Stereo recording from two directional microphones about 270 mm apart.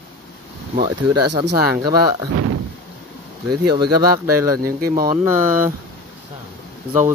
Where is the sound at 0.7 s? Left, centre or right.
Centre.